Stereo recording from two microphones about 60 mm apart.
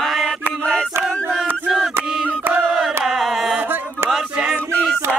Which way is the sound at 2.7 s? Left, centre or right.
Centre.